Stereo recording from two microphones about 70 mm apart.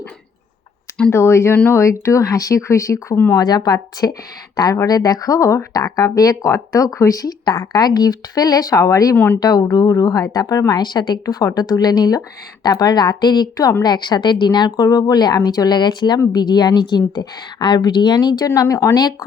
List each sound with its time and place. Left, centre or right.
1.1 s speech: left
3.3 s a woman's voice: left
4.5 s speech: left
9.1 s speech: left
9.4 s speech: left
10.7 s a woman's voice: left
12.6 s a woman's voice: left
13.8 s a woman's voice: left